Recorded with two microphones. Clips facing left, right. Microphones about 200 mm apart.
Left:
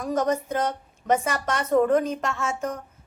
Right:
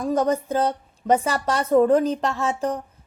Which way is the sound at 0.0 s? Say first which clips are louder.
Right 3 dB; 30° right (ahead or behind).